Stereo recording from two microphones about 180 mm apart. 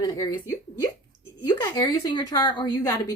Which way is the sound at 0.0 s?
20° left (ahead or behind).